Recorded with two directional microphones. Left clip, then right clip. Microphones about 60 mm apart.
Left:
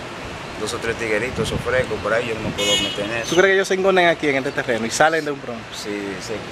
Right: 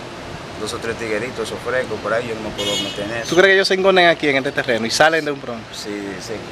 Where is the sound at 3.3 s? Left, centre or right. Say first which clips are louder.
Right 3 dB; right.